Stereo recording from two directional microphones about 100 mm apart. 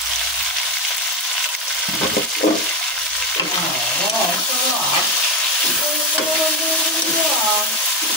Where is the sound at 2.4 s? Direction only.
90° left.